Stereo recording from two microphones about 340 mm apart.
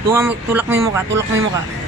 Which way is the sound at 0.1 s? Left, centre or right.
Centre.